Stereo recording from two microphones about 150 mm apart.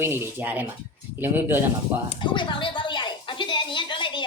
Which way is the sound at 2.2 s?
35° left (ahead or behind).